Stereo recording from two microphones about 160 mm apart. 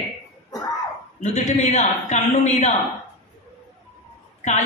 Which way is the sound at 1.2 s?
45° left (ahead or behind).